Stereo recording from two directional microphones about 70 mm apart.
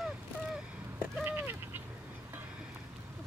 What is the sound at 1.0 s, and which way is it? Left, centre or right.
Duck, right.